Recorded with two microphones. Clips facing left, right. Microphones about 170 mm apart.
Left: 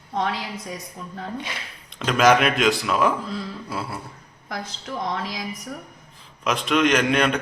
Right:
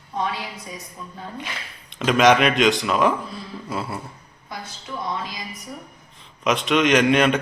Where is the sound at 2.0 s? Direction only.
Centre (ahead or behind).